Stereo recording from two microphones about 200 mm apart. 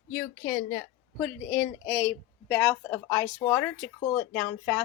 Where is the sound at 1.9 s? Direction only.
10° left (ahead or behind).